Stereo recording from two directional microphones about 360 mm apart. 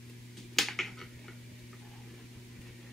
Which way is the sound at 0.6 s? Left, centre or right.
Centre.